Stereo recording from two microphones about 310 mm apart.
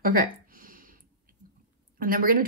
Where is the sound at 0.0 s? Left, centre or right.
Right.